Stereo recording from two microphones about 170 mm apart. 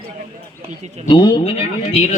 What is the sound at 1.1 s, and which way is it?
Speech, 25° left (ahead or behind).